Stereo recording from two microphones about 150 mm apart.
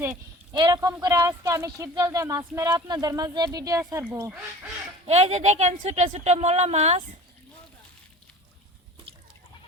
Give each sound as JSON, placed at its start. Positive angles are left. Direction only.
{"t": 0.5, "sound": "speech", "side_deg": -25}
{"t": 4.3, "sound": "speech", "side_deg": -10}
{"t": 5.0, "sound": "a woman's voice", "side_deg": -45}